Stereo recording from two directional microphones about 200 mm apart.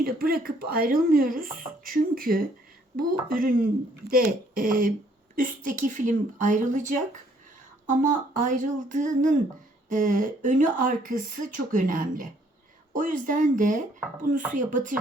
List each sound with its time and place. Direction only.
0.0 s speech: 50° right (ahead or behind)